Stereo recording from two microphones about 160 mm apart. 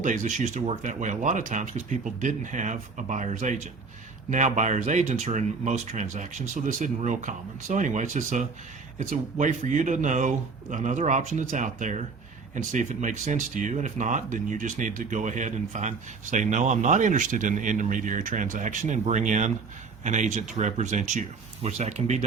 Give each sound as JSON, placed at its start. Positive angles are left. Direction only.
{"t": 0.0, "sound": "speech", "side_deg": -50}